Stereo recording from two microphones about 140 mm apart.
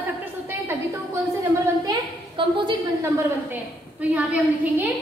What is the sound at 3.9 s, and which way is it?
Speech, 10° right (ahead or behind).